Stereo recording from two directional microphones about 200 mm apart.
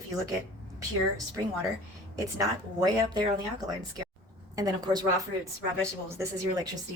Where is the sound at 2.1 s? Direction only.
20° right (ahead or behind).